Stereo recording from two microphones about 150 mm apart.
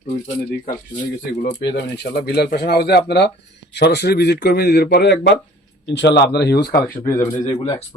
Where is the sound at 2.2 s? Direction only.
90° left.